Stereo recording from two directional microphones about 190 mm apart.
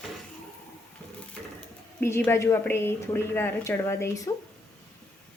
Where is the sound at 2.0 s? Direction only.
15° left (ahead or behind).